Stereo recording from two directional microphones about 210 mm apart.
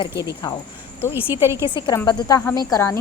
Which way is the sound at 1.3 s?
10° right (ahead or behind).